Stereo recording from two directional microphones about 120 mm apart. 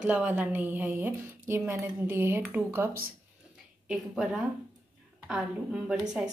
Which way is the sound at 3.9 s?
5° right (ahead or behind).